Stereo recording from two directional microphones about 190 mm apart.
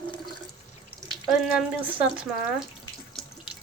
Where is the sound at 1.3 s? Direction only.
5° right (ahead or behind).